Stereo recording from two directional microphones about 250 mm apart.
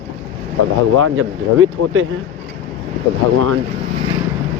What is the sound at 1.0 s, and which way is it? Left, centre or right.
Speech, right.